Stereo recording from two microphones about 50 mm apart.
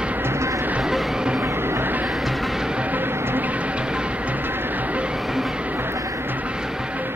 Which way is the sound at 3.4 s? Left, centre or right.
Right.